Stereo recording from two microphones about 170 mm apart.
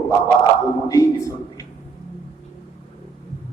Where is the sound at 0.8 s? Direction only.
20° left (ahead or behind).